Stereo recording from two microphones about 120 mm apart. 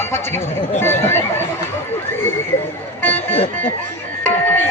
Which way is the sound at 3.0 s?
15° left (ahead or behind).